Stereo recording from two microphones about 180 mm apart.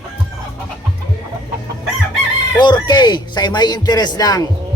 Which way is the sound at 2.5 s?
25° left (ahead or behind).